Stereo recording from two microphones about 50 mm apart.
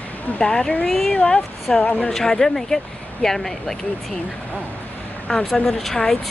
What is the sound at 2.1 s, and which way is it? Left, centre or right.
Speech, centre.